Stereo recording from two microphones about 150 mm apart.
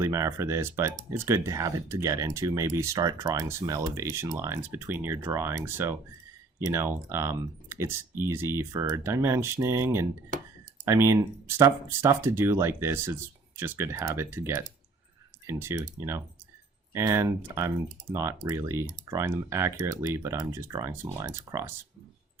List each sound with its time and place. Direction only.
0.0 s speech: 20° right (ahead or behind)